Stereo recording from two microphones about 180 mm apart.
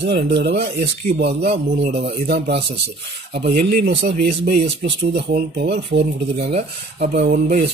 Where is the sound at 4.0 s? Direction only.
75° right (ahead or behind).